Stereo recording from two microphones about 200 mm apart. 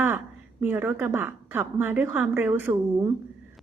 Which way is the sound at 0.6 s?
10° right (ahead or behind).